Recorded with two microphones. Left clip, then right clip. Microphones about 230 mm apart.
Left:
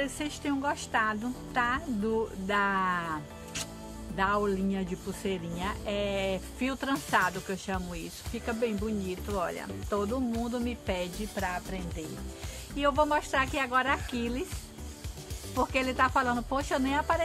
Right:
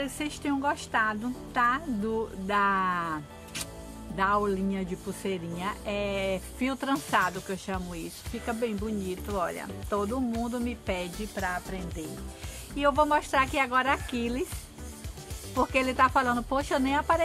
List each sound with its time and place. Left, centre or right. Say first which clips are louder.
0.0 s a woman's voice: even; centre
15.6 s speech: right 3 dB; centre